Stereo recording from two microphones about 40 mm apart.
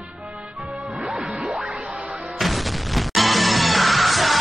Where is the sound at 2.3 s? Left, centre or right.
Centre.